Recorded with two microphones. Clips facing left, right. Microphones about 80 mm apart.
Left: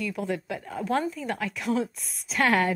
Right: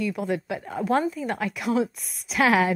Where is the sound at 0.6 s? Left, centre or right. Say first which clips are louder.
Right 3 dB; right.